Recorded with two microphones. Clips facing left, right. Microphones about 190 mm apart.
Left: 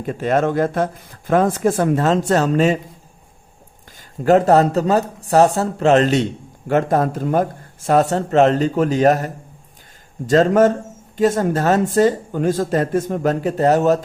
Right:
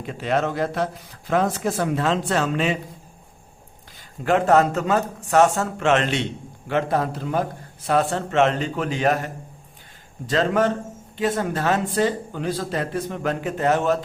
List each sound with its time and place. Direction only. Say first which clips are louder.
0.0 s speech: left 5 dB; 45° left (ahead or behind)
4.2 s speech: left 5 dB; 40° left (ahead or behind)